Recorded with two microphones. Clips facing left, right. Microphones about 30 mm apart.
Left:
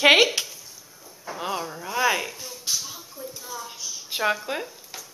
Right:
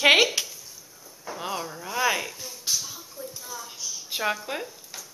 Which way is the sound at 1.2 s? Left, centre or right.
Centre.